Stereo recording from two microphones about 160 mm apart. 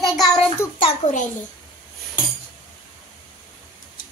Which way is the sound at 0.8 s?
40° left (ahead or behind).